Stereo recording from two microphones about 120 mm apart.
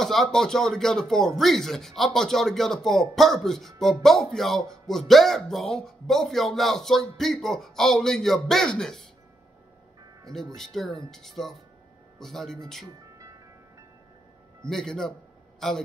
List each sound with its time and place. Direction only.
0.0 s speech: centre (ahead or behind)
10.2 s speech: 5° left (ahead or behind)
13.2 s music: 25° right (ahead or behind)
14.6 s speech: 5° left (ahead or behind)